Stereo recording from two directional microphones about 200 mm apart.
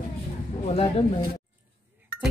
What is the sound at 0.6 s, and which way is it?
Speech, 30° left (ahead or behind).